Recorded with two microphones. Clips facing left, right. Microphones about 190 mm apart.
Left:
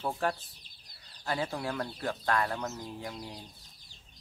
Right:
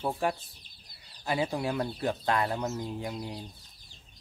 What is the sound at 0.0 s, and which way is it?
Speech, 10° right (ahead or behind).